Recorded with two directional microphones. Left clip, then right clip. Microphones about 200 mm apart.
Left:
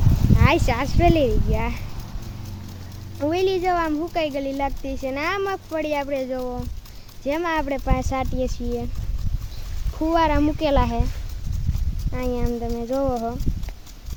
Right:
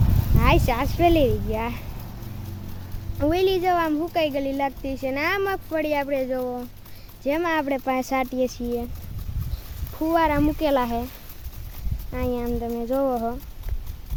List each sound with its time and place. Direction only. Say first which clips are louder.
0.3 s speech: even; centre (ahead or behind)
3.2 s speech: even; 10° right (ahead or behind)
10.0 s speech: left 1 dB; centre (ahead or behind)
12.1 s speech: even; centre (ahead or behind)